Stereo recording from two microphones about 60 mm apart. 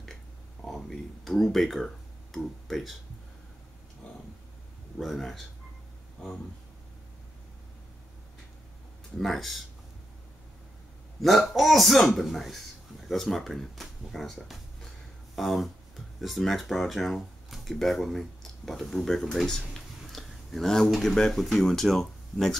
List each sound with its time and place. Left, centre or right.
0.7 s a man's voice: centre
4.9 s a man's voice: centre
9.2 s a man's voice: centre
11.1 s a man's voice: centre